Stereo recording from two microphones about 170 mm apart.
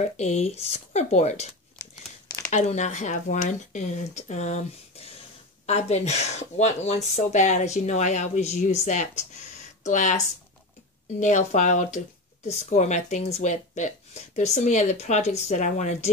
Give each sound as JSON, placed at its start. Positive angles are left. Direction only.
{"t": 0.0, "sound": "speech", "side_deg": 40}
{"t": 1.8, "sound": "crumpling", "side_deg": 20}
{"t": 2.5, "sound": "speech", "side_deg": 45}